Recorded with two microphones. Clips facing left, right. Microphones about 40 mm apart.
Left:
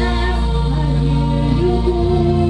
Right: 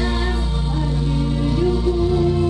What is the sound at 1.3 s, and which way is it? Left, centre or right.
Music, centre.